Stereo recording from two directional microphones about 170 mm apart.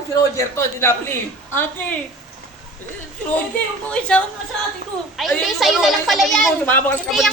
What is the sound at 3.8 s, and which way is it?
A man's voice, 5° left (ahead or behind).